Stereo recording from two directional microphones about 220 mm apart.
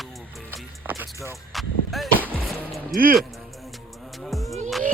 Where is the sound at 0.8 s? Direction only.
10° right (ahead or behind).